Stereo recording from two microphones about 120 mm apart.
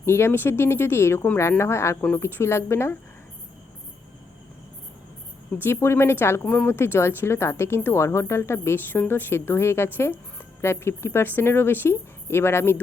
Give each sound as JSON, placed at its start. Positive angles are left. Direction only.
{"t": 0.0, "sound": "a woman's voice", "side_deg": 20}
{"t": 5.6, "sound": "a woman's voice", "side_deg": 20}